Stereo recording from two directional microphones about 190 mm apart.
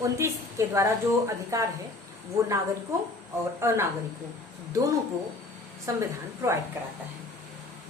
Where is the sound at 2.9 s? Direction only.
15° right (ahead or behind).